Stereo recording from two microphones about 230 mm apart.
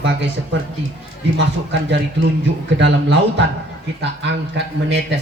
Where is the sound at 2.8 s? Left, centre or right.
Right.